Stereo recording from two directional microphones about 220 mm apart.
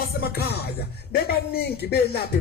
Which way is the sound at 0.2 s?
45° left (ahead or behind).